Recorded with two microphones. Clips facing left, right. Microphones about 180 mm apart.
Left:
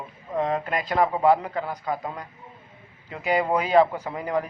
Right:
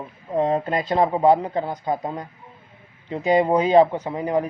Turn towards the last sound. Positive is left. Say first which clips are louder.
# right 4 dB
turn(degrees=-25)  # may be behind; listen again after turning